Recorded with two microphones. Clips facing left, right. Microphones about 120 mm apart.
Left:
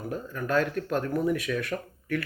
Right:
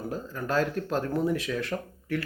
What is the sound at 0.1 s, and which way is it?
Speech, 30° right (ahead or behind).